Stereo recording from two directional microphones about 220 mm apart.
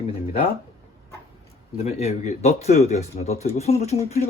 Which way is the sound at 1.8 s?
30° left (ahead or behind).